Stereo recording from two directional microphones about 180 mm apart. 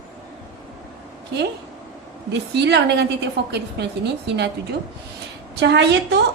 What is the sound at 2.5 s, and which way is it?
Speech, 70° right (ahead or behind).